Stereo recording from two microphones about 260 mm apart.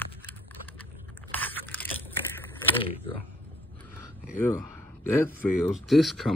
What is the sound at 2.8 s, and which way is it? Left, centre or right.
Speech, left.